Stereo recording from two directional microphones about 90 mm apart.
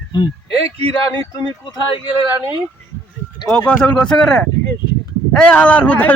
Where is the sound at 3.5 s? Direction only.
10° left (ahead or behind).